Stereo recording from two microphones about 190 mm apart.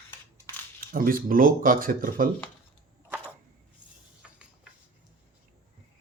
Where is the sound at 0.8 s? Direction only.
50° right (ahead or behind).